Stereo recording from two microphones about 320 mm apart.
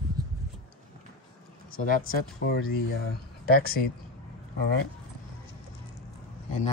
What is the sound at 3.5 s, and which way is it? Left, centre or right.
Speech, left.